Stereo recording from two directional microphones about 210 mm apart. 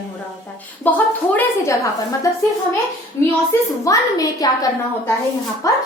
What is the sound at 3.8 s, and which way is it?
Speech, 15° left (ahead or behind).